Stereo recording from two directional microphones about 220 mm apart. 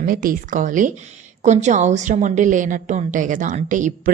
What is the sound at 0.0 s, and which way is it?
A woman's voice, 40° right (ahead or behind).